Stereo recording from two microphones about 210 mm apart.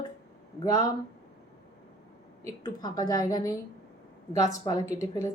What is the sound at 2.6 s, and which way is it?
A woman's voice, 20° left (ahead or behind).